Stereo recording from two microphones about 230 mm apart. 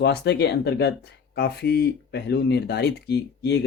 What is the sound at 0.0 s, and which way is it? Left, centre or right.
Speech, left.